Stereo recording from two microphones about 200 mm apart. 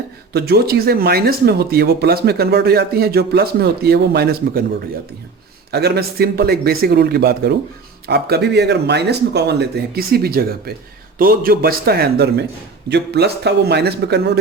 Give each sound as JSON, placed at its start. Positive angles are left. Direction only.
{"t": 0.3, "sound": "speech", "side_deg": -50}
{"t": 5.7, "sound": "speech", "side_deg": -55}